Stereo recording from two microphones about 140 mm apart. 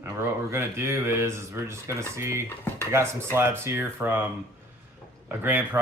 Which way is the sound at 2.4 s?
15° left (ahead or behind).